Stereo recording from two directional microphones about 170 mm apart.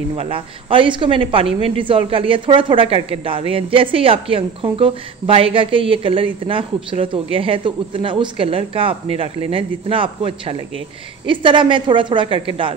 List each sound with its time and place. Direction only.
0.1 s a woman's voice: 30° right (ahead or behind)